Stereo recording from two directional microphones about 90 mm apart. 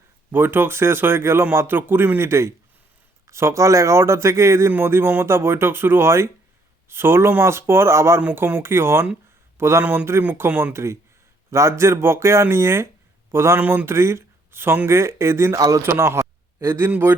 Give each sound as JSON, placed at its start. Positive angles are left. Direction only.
{"t": 0.3, "sound": "a man's voice", "side_deg": -25}
{"t": 9.8, "sound": "speech", "side_deg": -15}
{"t": 10.2, "sound": "speech", "side_deg": -25}